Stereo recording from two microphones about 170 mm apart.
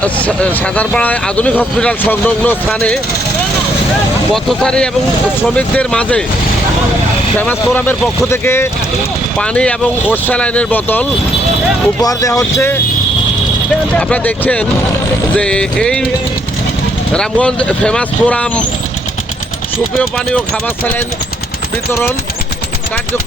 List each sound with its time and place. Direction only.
0.0 s speech: 5° left (ahead or behind)
4.4 s music: 5° left (ahead or behind)
5.4 s speech: 10° left (ahead or behind)
7.3 s speech: 10° left (ahead or behind)
12.0 s speech: 20° left (ahead or behind)
13.9 s speech: 10° left (ahead or behind)
15.4 s music: 5° left (ahead or behind)
17.2 s speech: 5° left (ahead or behind)
20.0 s speech: 5° left (ahead or behind)